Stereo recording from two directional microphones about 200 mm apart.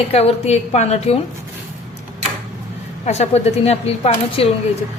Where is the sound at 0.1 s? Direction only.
30° left (ahead or behind).